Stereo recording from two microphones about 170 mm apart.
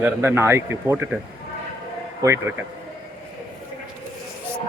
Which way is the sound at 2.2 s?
15° right (ahead or behind).